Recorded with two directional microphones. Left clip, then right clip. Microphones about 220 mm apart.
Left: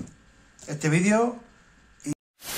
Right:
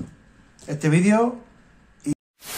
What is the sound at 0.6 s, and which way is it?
Speech, 5° left (ahead or behind).